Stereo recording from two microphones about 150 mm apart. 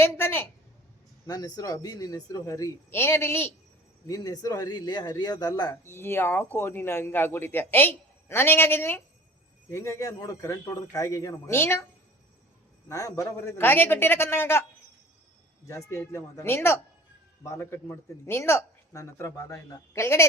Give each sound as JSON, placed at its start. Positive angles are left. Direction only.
{"t": 0.0, "sound": "a sound", "side_deg": 15}
{"t": 1.3, "sound": "speech", "side_deg": 25}
{"t": 5.8, "sound": "speech", "side_deg": 15}
{"t": 12.9, "sound": "speech", "side_deg": 20}
{"t": 15.6, "sound": "speech", "side_deg": 20}